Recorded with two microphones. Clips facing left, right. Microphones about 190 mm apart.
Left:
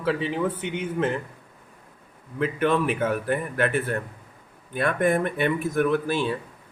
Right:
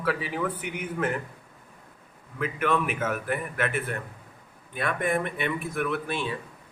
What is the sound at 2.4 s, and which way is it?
A man's voice, 30° left (ahead or behind).